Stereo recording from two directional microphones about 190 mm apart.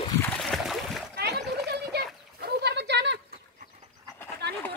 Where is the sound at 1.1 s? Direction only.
60° right (ahead or behind).